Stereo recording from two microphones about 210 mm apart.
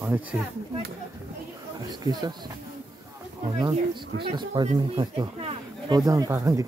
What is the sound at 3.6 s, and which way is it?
Speech, 20° right (ahead or behind).